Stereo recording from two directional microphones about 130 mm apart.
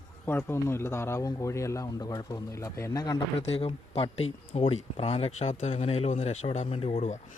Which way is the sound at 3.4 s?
50° left (ahead or behind).